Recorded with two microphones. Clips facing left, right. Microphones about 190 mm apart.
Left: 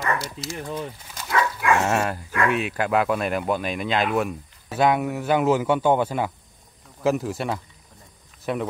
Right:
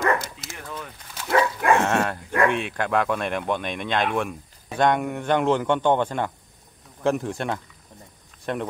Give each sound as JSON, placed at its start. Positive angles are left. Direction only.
{"t": 0.0, "sound": "speech", "side_deg": -50}
{"t": 0.7, "sound": "speech", "side_deg": 30}
{"t": 1.3, "sound": "bow-wow", "side_deg": -35}
{"t": 1.8, "sound": "speech", "side_deg": 5}